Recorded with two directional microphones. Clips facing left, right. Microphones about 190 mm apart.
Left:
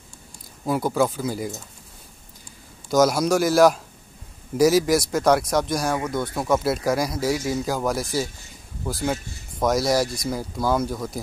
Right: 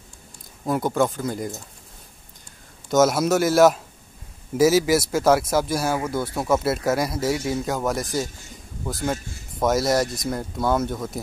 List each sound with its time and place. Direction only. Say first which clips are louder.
0.7 s speech: even; 5° left (ahead or behind)
2.9 s speech: even; centre (ahead or behind)